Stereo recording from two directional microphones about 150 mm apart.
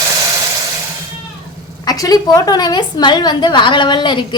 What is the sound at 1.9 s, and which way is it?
A woman's voice, 25° left (ahead or behind).